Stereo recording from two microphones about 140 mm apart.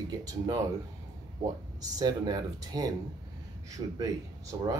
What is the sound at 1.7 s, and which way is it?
A man's voice, 30° right (ahead or behind).